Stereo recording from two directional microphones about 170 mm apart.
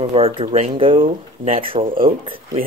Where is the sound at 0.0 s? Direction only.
35° right (ahead or behind).